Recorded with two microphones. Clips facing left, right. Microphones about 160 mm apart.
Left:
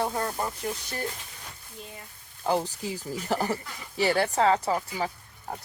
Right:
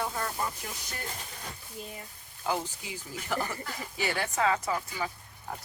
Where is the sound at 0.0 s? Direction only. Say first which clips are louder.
Left 5 dB; 35° left (ahead or behind).